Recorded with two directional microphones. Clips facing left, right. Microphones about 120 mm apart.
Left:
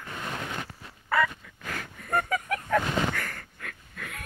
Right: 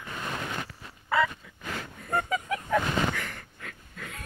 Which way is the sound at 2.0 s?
20° right (ahead or behind).